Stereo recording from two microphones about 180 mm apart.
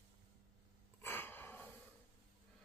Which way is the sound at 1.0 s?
10° left (ahead or behind).